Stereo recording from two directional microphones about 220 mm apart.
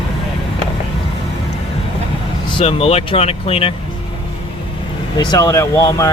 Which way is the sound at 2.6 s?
25° left (ahead or behind).